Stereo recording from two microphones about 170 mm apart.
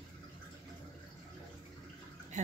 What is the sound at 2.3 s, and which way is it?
Speech, 45° right (ahead or behind).